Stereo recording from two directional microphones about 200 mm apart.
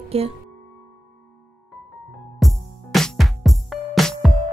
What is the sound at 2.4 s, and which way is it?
Music, centre (ahead or behind).